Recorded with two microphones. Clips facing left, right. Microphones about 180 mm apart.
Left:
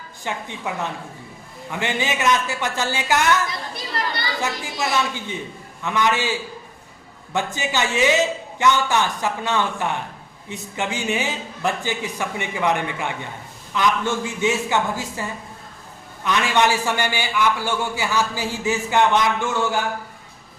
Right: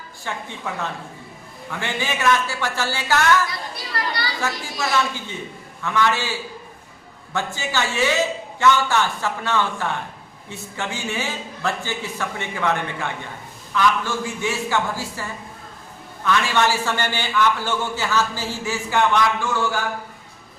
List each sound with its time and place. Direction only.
0.3 s a man's voice: 15° left (ahead or behind)
7.3 s a man's voice: 15° left (ahead or behind)
16.2 s a man's voice: 15° left (ahead or behind)